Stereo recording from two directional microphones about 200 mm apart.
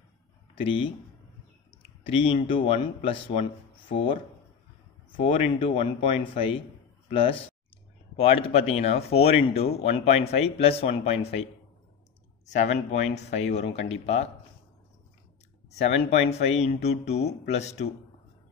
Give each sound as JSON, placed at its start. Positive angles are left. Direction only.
{"t": 0.6, "sound": "speech", "side_deg": 25}
{"t": 2.0, "sound": "speech", "side_deg": 25}
{"t": 5.2, "sound": "speech", "side_deg": 30}
{"t": 12.5, "sound": "speech", "side_deg": 35}
{"t": 15.9, "sound": "speech", "side_deg": 30}